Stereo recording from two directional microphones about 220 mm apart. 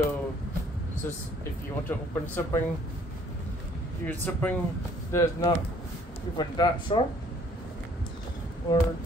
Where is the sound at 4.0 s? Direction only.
10° left (ahead or behind).